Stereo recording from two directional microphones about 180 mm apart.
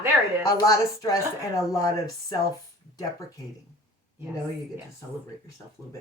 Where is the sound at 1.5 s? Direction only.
20° left (ahead or behind).